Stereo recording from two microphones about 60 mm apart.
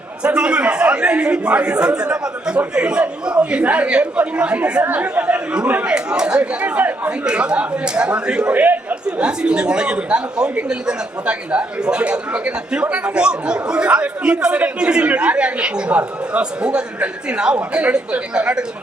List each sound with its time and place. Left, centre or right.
0.2 s a man's voice: centre
8.6 s chatter: right
9.0 s speech: centre